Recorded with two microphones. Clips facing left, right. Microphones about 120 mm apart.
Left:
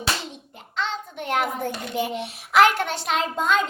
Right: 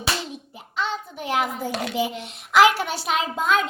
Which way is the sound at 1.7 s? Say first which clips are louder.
Right 4 dB; 90° right.